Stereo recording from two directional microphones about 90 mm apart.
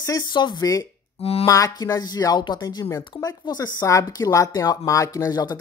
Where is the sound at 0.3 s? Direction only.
55° left (ahead or behind).